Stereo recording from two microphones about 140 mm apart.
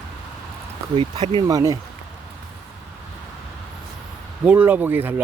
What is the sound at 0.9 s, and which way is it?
Speech, 40° right (ahead or behind).